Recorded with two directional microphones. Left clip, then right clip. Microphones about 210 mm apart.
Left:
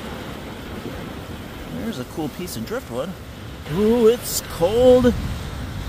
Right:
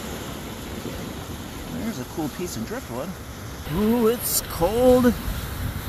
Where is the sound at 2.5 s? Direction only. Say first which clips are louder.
Left 4 dB; 15° left (ahead or behind).